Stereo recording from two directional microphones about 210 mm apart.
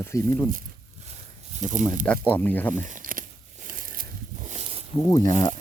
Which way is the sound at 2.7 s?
35° right (ahead or behind).